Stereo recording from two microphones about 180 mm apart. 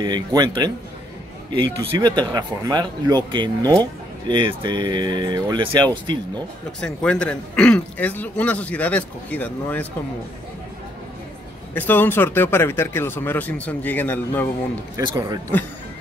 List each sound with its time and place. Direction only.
0.0 s speech: 25° right (ahead or behind)
6.8 s speech: 5° left (ahead or behind)
11.7 s speech: 10° left (ahead or behind)
15.0 s speech: 20° right (ahead or behind)